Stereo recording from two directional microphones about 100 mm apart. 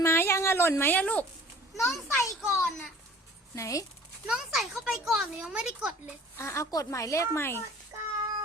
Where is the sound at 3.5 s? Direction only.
35° left (ahead or behind).